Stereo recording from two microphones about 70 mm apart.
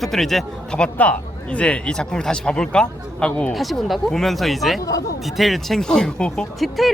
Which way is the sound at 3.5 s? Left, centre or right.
Centre.